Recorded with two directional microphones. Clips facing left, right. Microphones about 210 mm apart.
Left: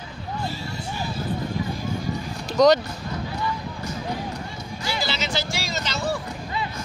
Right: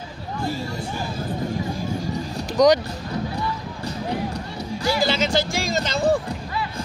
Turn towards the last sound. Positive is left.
turn(degrees=-50)  # may be behind; listen again after turning